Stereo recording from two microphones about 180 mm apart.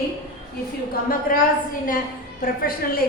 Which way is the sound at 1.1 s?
50° left (ahead or behind).